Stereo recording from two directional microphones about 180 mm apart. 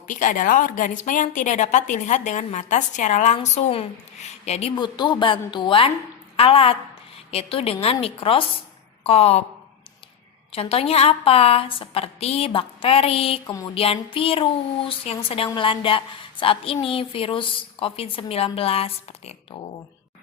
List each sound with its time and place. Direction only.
0.1 s a woman's voice: 45° left (ahead or behind)
4.7 s a woman's voice: 25° left (ahead or behind)
10.5 s a woman's voice: 30° left (ahead or behind)
13.5 s a woman's voice: 20° left (ahead or behind)
13.7 s a woman's voice: 30° left (ahead or behind)